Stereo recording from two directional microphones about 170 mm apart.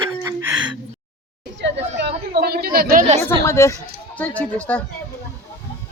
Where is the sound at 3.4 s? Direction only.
15° left (ahead or behind).